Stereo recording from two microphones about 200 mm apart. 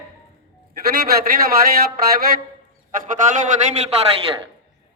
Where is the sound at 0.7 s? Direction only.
50° right (ahead or behind).